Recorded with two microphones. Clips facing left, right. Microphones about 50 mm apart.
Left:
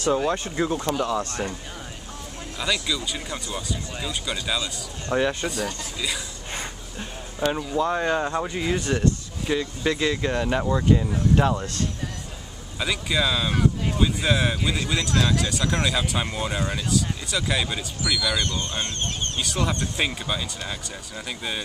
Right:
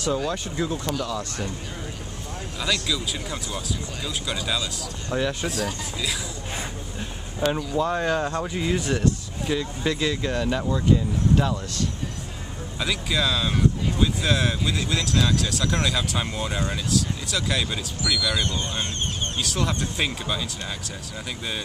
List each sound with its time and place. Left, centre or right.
0.1 s speech: left
2.6 s speech: centre; by 11.6 s left
12.7 s speech: centre
18.4 s speech: centre